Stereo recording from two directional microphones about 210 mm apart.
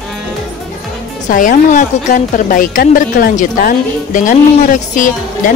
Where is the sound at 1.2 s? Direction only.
40° left (ahead or behind).